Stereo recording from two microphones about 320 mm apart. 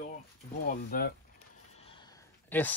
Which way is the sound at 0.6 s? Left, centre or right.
Left.